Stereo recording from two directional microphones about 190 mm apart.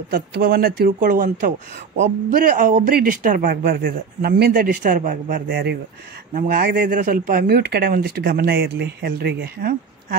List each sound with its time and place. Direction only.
0.1 s speech: 50° right (ahead or behind)
3.4 s speech: 55° right (ahead or behind)